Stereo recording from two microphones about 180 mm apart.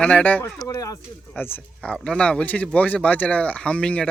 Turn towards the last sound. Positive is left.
turn(degrees=5)  # may be behind; listen again after turning